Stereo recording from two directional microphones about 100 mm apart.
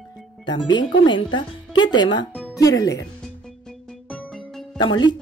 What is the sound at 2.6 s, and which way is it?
Speech, 35° left (ahead or behind).